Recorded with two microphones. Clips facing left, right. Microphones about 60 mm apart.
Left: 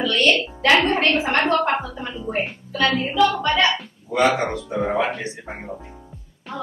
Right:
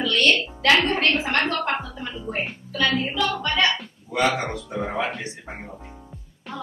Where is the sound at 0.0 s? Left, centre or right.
Centre.